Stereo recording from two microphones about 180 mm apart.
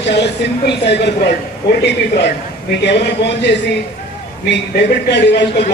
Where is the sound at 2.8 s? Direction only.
70° left (ahead or behind).